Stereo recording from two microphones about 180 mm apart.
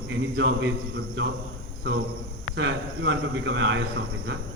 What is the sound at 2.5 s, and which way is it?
A man's voice, 90° right.